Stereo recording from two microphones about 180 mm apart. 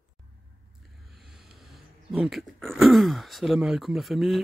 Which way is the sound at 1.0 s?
Centre (ahead or behind).